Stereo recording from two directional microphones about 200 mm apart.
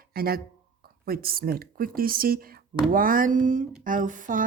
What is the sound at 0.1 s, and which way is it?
A woman's voice, 50° right (ahead or behind).